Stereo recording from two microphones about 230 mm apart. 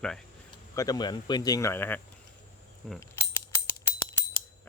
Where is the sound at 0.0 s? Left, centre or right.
Centre.